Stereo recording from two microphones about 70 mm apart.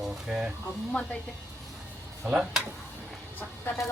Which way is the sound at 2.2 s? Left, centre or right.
Centre.